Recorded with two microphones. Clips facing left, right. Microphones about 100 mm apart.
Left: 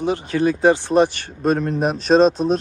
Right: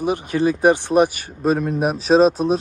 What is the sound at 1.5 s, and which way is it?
Speech, 5° right (ahead or behind).